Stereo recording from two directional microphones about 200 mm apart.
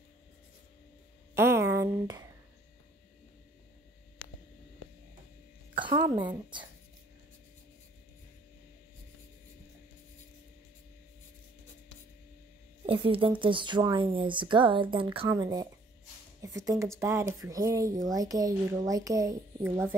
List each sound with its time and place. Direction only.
1.3 s a sound: 10° right (ahead or behind)
5.9 s a woman's voice: 20° right (ahead or behind)
12.8 s speech: 25° right (ahead or behind); by 20.0 s 10° right (ahead or behind)